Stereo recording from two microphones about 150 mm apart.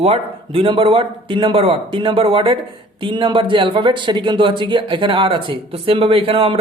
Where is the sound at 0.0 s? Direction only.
40° right (ahead or behind).